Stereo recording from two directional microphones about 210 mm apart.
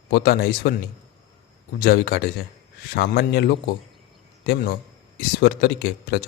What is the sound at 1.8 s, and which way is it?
A man's voice, 45° left (ahead or behind).